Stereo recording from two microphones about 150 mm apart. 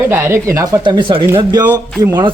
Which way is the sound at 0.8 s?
35° right (ahead or behind).